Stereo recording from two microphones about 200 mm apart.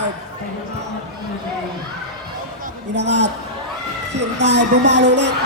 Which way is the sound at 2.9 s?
60° right (ahead or behind).